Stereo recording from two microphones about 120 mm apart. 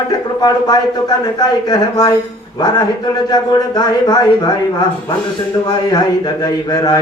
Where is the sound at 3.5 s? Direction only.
35° left (ahead or behind).